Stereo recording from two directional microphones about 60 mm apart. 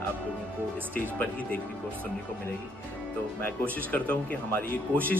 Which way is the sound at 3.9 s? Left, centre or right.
Left.